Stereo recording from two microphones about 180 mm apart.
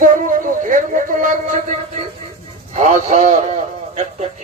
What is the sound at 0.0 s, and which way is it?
Music, 45° right (ahead or behind).